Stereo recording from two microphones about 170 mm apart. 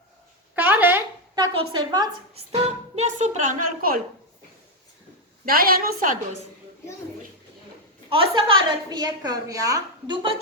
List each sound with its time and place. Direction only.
0.5 s a sound: 10° right (ahead or behind)
1.4 s a woman's voice: 25° right (ahead or behind)
2.5 s a woman's voice: 40° right (ahead or behind); by 4.0 s 55° right (ahead or behind)
5.5 s a woman's voice: 60° right (ahead or behind)
8.1 s a woman's voice: 30° right (ahead or behind)